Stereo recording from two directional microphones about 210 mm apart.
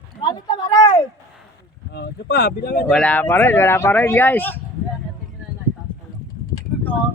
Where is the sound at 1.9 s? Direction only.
50° left (ahead or behind).